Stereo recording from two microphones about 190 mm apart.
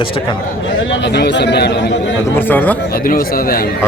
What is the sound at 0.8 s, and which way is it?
A man's voice, 65° left (ahead or behind).